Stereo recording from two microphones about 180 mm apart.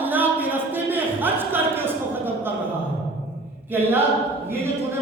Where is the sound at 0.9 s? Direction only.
10° right (ahead or behind).